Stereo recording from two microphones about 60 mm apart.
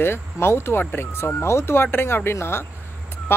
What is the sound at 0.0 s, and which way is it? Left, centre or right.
Speech, left.